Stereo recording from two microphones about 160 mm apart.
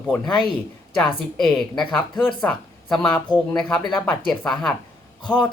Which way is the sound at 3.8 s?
25° left (ahead or behind).